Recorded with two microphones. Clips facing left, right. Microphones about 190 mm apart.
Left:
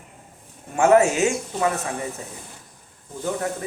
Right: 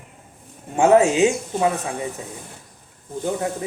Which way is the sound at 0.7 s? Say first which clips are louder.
Right 2 dB; 20° right (ahead or behind).